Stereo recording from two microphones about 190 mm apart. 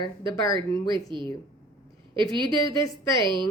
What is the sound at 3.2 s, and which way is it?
Speech, 25° right (ahead or behind).